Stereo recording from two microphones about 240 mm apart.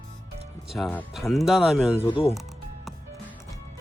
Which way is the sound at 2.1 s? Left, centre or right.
Left.